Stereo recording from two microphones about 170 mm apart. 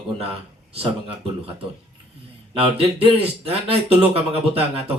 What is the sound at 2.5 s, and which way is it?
Speech, 35° right (ahead or behind).